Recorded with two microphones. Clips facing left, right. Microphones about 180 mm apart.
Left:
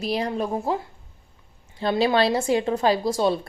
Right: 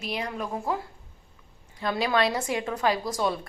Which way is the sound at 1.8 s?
30° left (ahead or behind).